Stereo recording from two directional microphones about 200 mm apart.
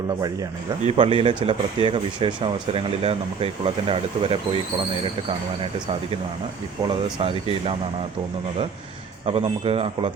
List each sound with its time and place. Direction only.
0.9 s speech: 25° right (ahead or behind)
6.8 s speech: 30° right (ahead or behind)
9.2 s speech: 30° right (ahead or behind)